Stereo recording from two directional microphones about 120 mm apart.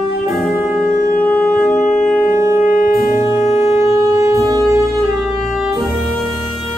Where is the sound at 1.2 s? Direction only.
10° left (ahead or behind).